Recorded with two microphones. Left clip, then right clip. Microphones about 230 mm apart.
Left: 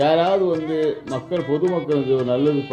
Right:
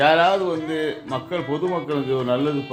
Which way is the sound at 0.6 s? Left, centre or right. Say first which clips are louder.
Left 3 dB; centre.